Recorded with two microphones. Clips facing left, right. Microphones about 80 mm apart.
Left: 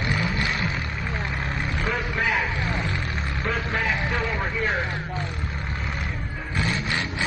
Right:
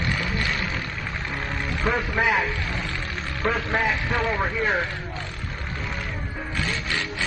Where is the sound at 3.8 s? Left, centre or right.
Centre.